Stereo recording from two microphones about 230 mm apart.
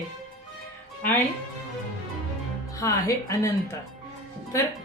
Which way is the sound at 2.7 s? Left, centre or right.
Centre.